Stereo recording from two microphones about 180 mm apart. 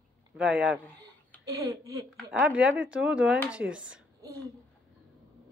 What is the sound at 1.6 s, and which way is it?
Speech, 20° right (ahead or behind).